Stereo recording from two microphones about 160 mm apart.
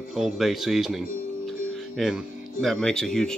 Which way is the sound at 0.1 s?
Centre (ahead or behind).